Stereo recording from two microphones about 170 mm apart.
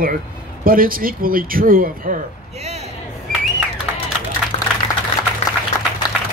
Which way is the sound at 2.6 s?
40° right (ahead or behind).